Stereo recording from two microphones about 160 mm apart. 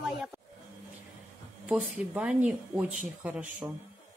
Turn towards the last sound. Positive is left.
turn(degrees=-10)  # may be behind; listen again after turning